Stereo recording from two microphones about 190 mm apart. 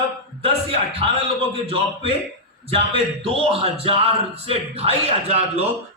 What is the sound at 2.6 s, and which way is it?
Speech, 30° right (ahead or behind).